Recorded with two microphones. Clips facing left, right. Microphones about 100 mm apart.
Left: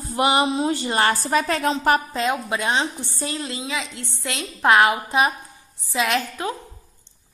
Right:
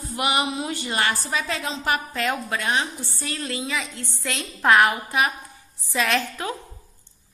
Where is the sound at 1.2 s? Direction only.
50° left (ahead or behind).